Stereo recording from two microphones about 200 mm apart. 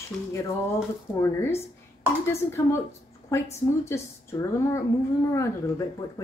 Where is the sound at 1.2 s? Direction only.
15° left (ahead or behind).